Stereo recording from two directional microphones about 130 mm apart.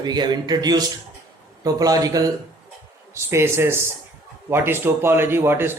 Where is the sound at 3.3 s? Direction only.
20° right (ahead or behind).